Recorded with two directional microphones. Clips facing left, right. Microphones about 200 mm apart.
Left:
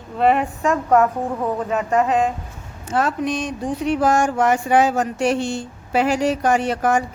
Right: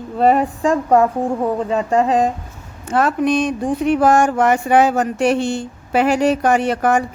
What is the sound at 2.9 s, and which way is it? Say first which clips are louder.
Speech: right 5 dB; 60° right (ahead or behind).